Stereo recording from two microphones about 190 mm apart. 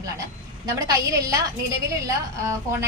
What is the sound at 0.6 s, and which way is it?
Speech, 20° right (ahead or behind).